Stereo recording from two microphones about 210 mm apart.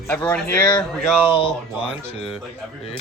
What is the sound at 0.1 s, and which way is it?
Speech, 5° left (ahead or behind).